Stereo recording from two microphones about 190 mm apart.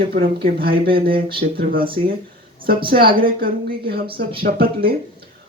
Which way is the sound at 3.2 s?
50° right (ahead or behind).